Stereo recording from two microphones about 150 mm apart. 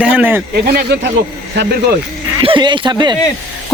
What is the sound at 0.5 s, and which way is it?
Speech, 90° right.